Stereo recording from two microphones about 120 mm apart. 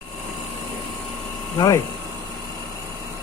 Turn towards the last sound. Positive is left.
turn(degrees=30)  # may be behind; listen again after turning